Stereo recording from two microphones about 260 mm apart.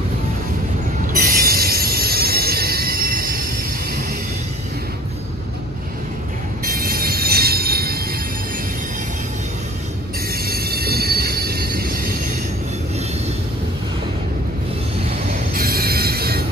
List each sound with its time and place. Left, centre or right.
1.1 s train: right
6.6 s train: right
10.3 s train: right
15.3 s train: right